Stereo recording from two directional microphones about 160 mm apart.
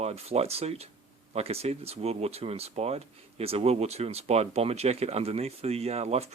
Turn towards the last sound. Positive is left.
turn(degrees=-40)  # may be behind; listen again after turning